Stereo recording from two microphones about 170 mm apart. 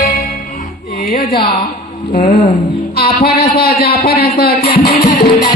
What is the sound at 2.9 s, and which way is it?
Speech, 65° left (ahead or behind).